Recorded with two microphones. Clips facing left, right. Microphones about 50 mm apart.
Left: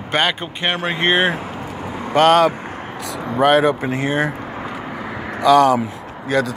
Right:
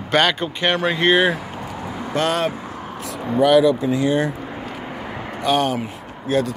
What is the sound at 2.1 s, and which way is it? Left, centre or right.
Speech, left.